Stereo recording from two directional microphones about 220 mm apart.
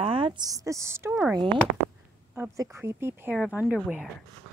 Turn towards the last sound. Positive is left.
turn(degrees=-5)  # may be behind; listen again after turning